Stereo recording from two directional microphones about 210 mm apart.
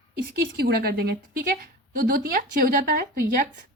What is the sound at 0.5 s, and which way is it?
Speech, 50° right (ahead or behind).